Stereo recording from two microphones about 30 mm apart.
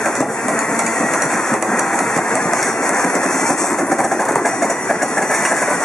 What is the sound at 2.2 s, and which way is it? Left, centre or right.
Engine, left.